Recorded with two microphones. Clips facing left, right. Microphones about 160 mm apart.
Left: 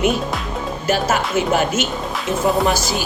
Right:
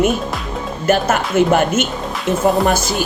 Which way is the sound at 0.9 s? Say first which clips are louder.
Right 3 dB; 55° right (ahead or behind).